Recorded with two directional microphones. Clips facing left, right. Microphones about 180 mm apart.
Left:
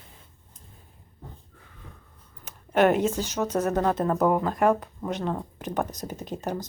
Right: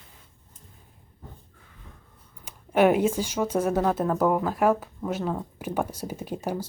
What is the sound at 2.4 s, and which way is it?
Speech, 10° right (ahead or behind).